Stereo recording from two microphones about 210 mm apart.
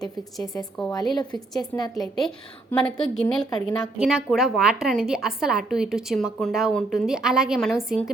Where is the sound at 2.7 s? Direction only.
5° left (ahead or behind).